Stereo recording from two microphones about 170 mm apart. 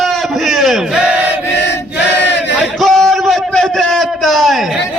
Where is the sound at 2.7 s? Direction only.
Centre (ahead or behind).